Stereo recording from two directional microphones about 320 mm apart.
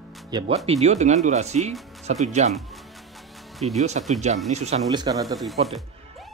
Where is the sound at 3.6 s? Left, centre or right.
Centre.